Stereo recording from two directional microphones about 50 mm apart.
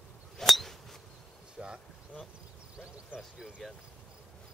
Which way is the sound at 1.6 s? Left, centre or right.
Centre.